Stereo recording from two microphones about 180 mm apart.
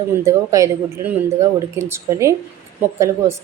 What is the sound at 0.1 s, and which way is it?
A woman's voice, 15° right (ahead or behind).